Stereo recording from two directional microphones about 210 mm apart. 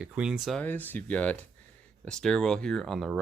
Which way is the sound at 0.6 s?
10° left (ahead or behind).